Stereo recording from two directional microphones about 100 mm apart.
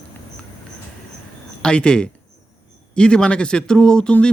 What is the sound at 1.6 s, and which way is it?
Speech, 10° left (ahead or behind).